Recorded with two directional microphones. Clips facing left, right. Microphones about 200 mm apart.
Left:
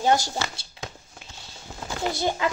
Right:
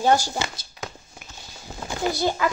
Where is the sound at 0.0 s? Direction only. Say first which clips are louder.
Right 2 dB; 20° left (ahead or behind).